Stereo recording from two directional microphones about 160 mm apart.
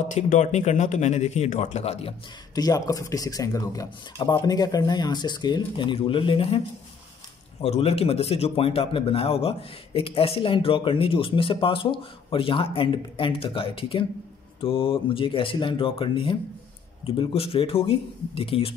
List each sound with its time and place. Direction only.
0.0 s speech: 50° left (ahead or behind)
2.5 s speech: 25° left (ahead or behind)
7.6 s a man's voice: 40° left (ahead or behind)